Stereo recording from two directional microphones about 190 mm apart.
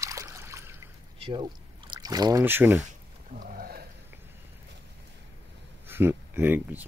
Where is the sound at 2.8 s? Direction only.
45° right (ahead or behind).